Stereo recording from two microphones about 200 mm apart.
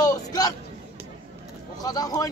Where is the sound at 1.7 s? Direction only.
20° left (ahead or behind).